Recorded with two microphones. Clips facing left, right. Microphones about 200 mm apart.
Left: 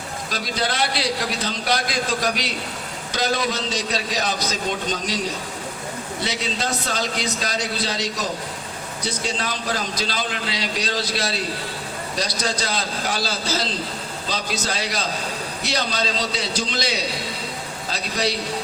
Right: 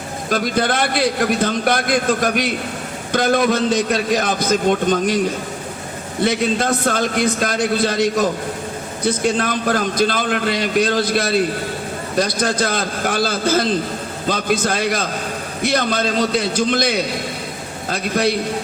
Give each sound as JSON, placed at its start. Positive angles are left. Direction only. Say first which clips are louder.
{"t": 0.3, "sound": "a man's voice", "louder": "right 8 dB", "side_deg": -55}